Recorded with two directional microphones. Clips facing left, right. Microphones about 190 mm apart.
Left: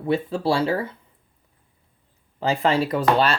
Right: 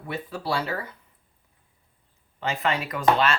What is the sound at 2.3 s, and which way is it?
Speech, 35° left (ahead or behind).